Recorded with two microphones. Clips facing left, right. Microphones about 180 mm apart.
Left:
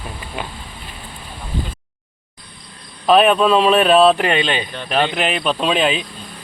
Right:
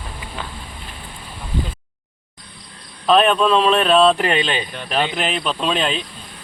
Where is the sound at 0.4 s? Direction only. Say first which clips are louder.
Left 4 dB; 15° left (ahead or behind).